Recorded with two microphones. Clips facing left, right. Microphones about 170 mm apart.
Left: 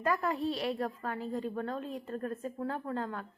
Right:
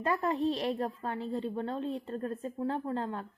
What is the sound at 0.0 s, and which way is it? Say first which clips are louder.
A woman's voice: right 2 dB; 30° right (ahead or behind).